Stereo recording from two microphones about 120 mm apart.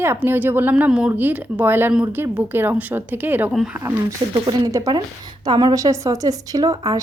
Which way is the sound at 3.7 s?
20° right (ahead or behind).